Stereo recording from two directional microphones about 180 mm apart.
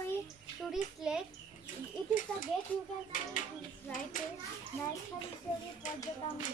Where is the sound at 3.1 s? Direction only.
45° left (ahead or behind).